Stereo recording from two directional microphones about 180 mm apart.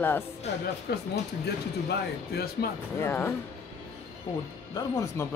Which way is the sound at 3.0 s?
15° left (ahead or behind).